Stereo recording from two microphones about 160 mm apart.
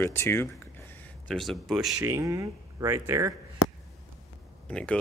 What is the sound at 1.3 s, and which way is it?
Speech, centre (ahead or behind).